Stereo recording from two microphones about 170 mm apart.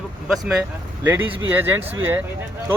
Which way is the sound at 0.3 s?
5° right (ahead or behind).